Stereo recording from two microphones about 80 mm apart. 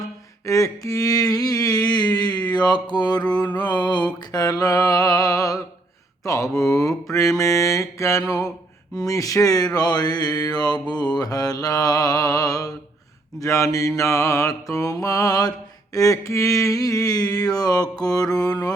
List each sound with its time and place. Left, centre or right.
0.4 s a sound: left
3.6 s mantra: left
9.7 s mantra: left